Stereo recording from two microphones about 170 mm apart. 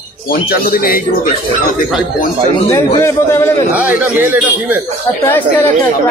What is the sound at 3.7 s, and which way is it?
Speech, 10° right (ahead or behind).